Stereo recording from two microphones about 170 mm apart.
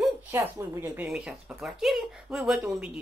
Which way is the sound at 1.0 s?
5° right (ahead or behind).